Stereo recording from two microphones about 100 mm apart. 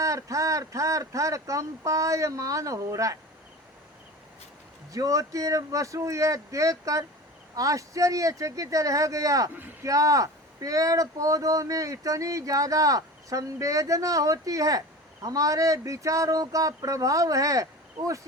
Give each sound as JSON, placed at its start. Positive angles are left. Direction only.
{"t": 0.0, "sound": "speech", "side_deg": -35}
{"t": 4.9, "sound": "speech", "side_deg": -35}